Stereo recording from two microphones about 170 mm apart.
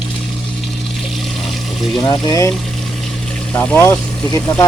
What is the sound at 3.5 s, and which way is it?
Speech, 10° left (ahead or behind).